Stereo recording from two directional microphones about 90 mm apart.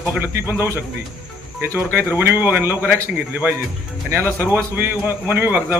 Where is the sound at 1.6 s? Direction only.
30° right (ahead or behind).